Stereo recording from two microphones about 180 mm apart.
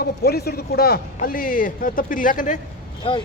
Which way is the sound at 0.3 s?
60° left (ahead or behind).